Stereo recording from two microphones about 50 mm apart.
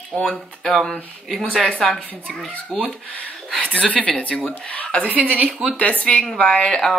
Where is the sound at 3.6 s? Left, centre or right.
Left.